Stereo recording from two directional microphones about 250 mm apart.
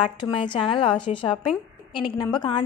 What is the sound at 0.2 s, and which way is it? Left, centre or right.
A woman's voice, centre.